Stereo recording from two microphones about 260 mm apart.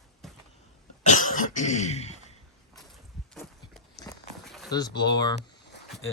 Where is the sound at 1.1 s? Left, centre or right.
Left.